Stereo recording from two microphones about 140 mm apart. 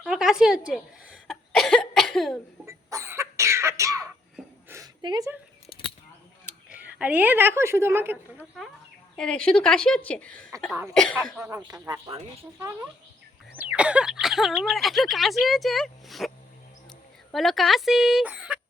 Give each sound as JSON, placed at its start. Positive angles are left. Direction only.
{"t": 0.1, "sound": "a sound", "side_deg": -5}
{"t": 1.3, "sound": "cough", "side_deg": 5}
{"t": 2.6, "sound": "cough", "side_deg": -20}
{"t": 4.7, "sound": "a sound", "side_deg": -15}
{"t": 5.0, "sound": "speech", "side_deg": -30}
{"t": 5.6, "sound": "a sound", "side_deg": 40}
{"t": 6.4, "sound": "speech", "side_deg": -10}
{"t": 9.1, "sound": "a woman's voice", "side_deg": 5}
{"t": 11.3, "sound": "speech", "side_deg": -20}
{"t": 13.6, "sound": "speech", "side_deg": -10}
{"t": 17.3, "sound": "speech", "side_deg": 0}